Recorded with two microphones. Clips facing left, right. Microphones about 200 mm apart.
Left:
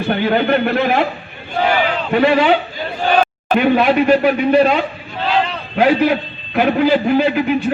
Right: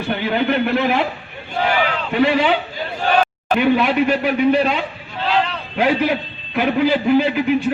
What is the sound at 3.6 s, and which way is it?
Speech, 55° left (ahead or behind).